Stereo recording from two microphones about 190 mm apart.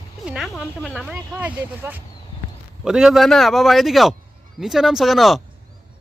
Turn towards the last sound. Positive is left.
turn(degrees=0)  # may be behind; listen again after turning